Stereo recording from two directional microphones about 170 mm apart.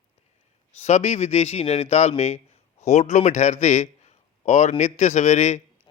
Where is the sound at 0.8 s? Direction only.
40° left (ahead or behind).